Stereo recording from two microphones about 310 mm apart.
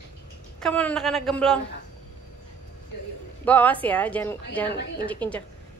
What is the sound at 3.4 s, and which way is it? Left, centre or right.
A woman's voice, centre.